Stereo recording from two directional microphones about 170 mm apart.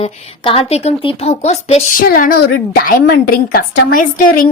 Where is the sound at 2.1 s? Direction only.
60° left (ahead or behind).